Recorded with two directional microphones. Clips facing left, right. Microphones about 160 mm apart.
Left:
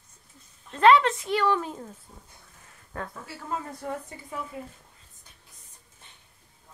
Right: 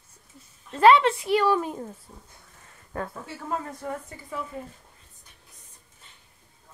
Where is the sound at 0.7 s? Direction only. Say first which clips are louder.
Right 1 dB; 10° right (ahead or behind).